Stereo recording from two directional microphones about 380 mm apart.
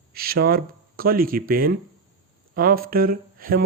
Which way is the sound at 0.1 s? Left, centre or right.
Right.